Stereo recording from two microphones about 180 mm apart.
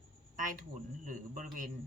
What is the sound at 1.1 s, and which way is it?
Speech, 45° right (ahead or behind).